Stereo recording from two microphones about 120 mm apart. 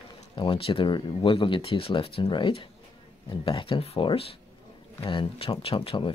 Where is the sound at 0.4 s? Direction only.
45° left (ahead or behind).